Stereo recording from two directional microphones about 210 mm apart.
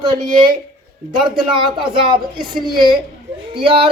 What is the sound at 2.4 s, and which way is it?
Speech, centre (ahead or behind).